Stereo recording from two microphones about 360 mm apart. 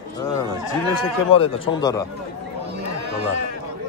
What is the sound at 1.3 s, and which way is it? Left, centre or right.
Speech, centre.